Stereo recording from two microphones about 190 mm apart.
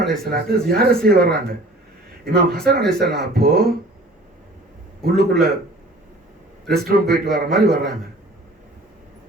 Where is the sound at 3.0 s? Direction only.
55° right (ahead or behind).